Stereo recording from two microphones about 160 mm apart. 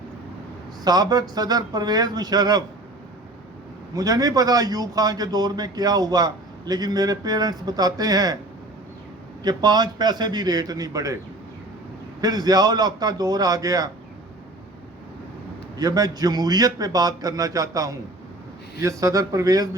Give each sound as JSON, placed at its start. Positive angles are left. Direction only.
{"t": 0.9, "sound": "a man's voice", "side_deg": -25}
{"t": 3.9, "sound": "a man's voice", "side_deg": -20}
{"t": 9.4, "sound": "a man's voice", "side_deg": -25}
{"t": 12.2, "sound": "a man's voice", "side_deg": -25}
{"t": 15.8, "sound": "a man's voice", "side_deg": -25}